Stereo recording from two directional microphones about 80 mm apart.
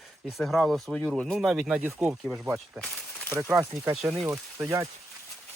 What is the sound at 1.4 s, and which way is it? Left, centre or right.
Speech, centre.